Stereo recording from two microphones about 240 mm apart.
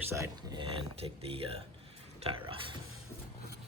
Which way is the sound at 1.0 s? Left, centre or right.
Right.